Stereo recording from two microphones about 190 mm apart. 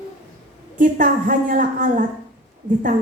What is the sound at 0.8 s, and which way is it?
A woman's voice, 45° right (ahead or behind).